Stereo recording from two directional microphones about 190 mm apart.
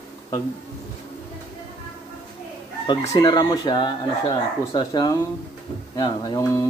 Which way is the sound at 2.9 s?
20° left (ahead or behind).